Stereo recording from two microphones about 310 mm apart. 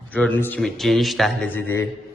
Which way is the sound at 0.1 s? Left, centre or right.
Centre.